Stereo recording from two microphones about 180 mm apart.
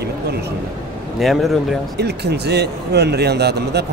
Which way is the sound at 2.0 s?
65° right (ahead or behind).